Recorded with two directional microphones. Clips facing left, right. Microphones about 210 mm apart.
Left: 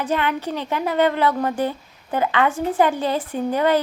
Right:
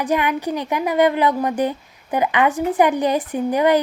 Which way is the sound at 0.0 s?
15° right (ahead or behind).